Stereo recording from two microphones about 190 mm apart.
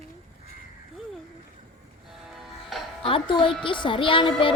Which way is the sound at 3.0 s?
25° left (ahead or behind).